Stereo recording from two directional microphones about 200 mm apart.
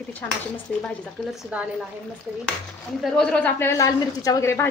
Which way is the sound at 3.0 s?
5° left (ahead or behind).